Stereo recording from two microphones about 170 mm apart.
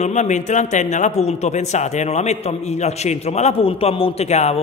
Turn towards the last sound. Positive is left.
turn(degrees=40)  # may be behind; listen again after turning